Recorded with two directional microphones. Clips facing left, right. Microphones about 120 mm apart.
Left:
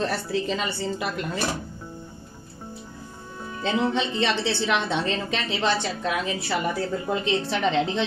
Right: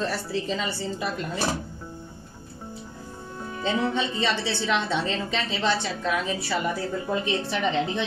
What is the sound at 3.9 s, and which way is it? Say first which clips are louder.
Speech: left 2 dB; 70° left (ahead or behind).